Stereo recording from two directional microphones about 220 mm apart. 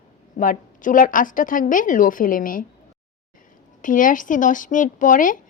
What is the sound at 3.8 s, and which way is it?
Speech, 35° left (ahead or behind).